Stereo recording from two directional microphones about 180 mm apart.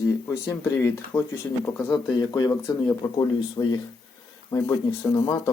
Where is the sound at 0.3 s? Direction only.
15° left (ahead or behind).